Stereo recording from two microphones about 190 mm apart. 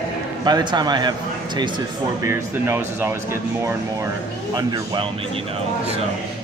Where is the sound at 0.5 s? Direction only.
20° right (ahead or behind).